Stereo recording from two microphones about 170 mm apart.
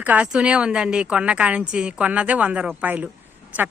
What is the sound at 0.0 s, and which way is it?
Speech, 10° right (ahead or behind).